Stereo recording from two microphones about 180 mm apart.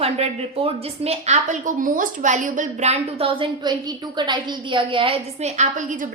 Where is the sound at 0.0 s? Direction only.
35° right (ahead or behind).